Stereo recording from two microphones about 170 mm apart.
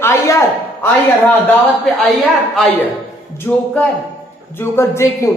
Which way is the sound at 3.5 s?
10° left (ahead or behind).